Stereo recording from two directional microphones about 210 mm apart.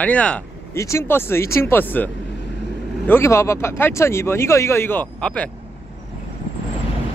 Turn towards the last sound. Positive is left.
turn(degrees=5)  # may be behind; listen again after turning